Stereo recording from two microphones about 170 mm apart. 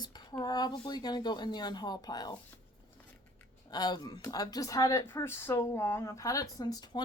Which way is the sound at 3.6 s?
25° left (ahead or behind).